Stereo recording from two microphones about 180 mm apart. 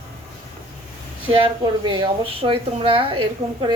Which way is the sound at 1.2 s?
30° right (ahead or behind).